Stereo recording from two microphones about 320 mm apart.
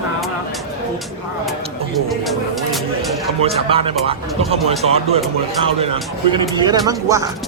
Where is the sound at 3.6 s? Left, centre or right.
Centre.